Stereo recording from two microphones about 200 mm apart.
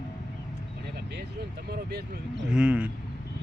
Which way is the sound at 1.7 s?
50° right (ahead or behind).